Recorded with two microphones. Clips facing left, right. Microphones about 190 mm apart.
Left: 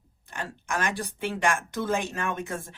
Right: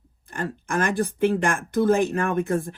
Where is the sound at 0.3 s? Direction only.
55° right (ahead or behind).